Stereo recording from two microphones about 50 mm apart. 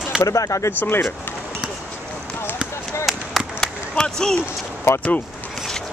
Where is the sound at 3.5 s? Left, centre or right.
Centre.